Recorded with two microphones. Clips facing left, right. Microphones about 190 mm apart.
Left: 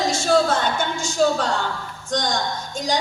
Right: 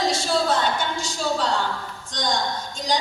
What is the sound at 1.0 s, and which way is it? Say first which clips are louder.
A woman's voice: left 5 dB; 45° left (ahead or behind).